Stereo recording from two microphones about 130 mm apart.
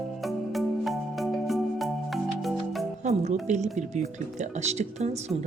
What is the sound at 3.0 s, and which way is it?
Music, 60° right (ahead or behind).